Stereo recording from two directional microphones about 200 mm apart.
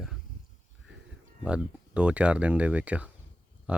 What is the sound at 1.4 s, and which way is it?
Speech, 5° right (ahead or behind).